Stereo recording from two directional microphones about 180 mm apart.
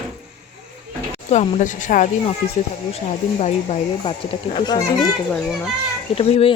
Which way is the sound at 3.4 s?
35° left (ahead or behind).